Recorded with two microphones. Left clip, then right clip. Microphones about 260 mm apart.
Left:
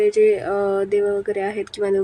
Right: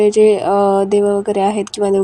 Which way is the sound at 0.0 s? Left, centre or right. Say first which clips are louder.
Right 5 dB; centre.